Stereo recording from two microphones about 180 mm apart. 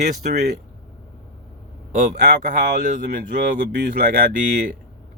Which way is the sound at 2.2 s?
65° right (ahead or behind).